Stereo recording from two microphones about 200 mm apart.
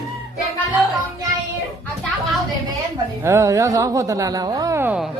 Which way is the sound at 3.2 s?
15° right (ahead or behind).